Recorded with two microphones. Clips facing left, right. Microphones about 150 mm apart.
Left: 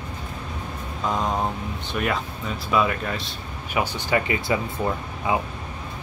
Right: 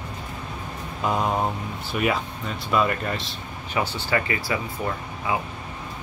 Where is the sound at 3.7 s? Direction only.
15° left (ahead or behind).